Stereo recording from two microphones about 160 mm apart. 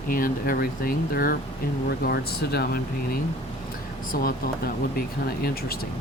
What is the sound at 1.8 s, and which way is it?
Speech, 80° left.